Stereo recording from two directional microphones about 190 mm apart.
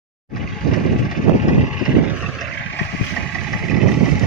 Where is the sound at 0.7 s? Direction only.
45° left (ahead or behind).